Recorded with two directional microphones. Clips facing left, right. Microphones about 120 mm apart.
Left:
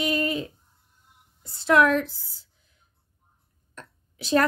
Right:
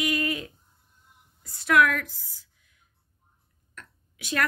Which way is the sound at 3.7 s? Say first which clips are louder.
Left 4 dB; 30° left (ahead or behind).